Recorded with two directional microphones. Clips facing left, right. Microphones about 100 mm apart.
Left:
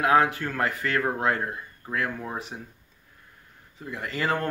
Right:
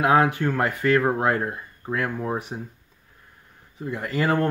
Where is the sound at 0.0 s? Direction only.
30° right (ahead or behind).